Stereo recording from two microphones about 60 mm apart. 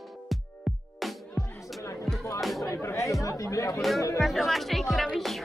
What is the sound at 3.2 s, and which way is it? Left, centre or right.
Chatter, left.